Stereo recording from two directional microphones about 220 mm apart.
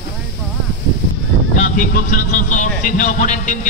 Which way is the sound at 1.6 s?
40° left (ahead or behind).